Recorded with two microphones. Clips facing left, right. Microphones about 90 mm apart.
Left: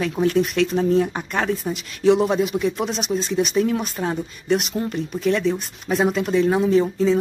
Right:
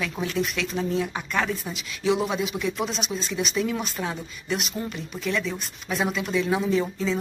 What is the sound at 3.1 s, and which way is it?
Speech, 40° left (ahead or behind).